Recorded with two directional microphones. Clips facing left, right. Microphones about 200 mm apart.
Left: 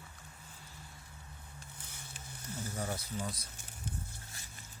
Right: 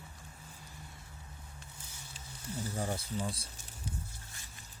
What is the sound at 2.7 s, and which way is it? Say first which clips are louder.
Speech: right 2 dB; 30° right (ahead or behind).